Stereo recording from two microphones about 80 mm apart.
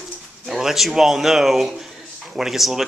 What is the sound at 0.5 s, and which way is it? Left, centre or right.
Speech, centre.